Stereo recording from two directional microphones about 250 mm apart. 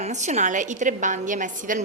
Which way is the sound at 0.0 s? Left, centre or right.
Right.